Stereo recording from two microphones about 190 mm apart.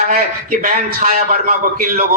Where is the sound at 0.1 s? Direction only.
50° right (ahead or behind).